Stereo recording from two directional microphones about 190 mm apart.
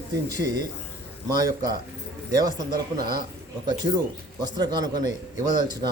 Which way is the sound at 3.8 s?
25° right (ahead or behind).